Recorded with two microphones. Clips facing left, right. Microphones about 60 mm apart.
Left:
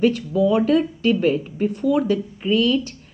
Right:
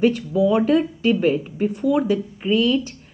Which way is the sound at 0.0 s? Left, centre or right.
Centre.